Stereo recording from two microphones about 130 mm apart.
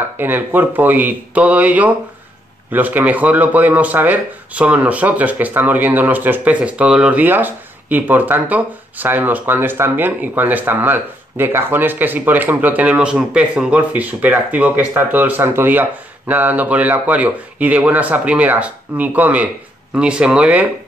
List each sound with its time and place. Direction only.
0.2 s speech: 15° right (ahead or behind)